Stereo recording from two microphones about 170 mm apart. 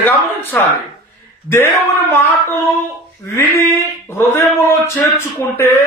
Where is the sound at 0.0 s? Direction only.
10° left (ahead or behind).